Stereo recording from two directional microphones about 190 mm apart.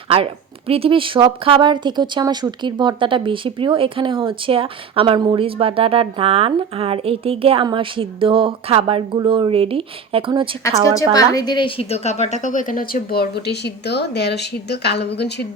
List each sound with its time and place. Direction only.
0.7 s speech: 30° right (ahead or behind)
10.6 s a woman's voice: 15° left (ahead or behind); by 15.4 s 60° left (ahead or behind)